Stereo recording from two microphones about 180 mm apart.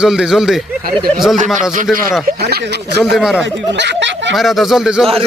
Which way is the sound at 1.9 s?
5° right (ahead or behind).